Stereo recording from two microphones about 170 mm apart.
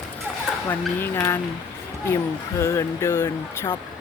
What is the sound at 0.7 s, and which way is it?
Speech, 10° left (ahead or behind).